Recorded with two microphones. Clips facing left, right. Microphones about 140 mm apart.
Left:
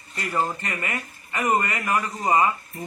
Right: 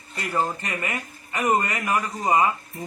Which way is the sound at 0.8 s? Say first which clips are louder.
Right 1 dB; 10° right (ahead or behind).